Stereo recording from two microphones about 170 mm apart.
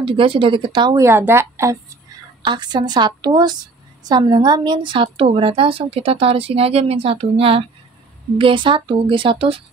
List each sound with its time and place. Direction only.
0.0 s a woman's voice: 30° right (ahead or behind); by 1.8 s 15° right (ahead or behind)
2.4 s a woman's voice: 25° right (ahead or behind)